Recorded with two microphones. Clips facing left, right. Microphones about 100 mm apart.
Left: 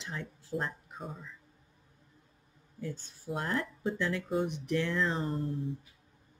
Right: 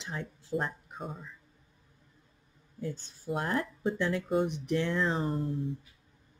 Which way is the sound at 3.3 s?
15° right (ahead or behind).